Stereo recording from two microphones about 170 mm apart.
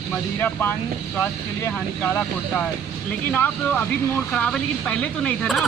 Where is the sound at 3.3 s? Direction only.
10° left (ahead or behind).